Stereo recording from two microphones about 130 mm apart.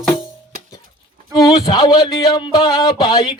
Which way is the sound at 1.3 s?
30° left (ahead or behind).